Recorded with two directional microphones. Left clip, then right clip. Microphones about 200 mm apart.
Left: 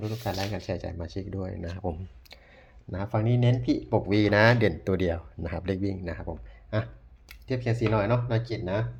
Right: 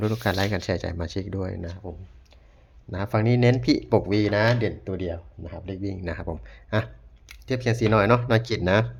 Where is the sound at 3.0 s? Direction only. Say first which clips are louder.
Right 6 dB; 20° right (ahead or behind).